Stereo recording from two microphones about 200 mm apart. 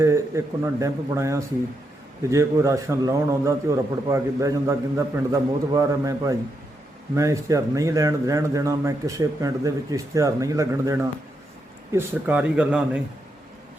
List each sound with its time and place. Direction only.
0.0 s a man's voice: 15° right (ahead or behind)